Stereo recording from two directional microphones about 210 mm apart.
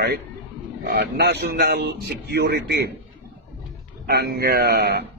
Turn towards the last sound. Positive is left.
turn(degrees=-50)  # may be behind; listen again after turning